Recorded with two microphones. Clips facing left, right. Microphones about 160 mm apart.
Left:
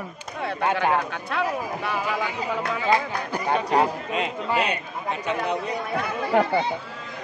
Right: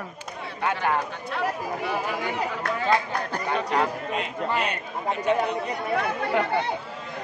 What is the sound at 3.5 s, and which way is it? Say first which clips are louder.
Speech: left 4 dB; 35° left (ahead or behind).